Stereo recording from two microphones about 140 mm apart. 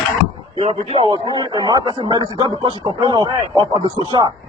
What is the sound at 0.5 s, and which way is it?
A man's voice, 45° right (ahead or behind).